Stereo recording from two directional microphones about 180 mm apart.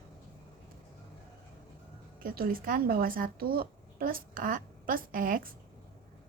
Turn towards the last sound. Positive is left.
turn(degrees=-50)  # may be behind; listen again after turning